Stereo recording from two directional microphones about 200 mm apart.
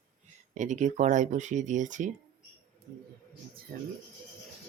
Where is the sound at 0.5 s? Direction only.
40° right (ahead or behind).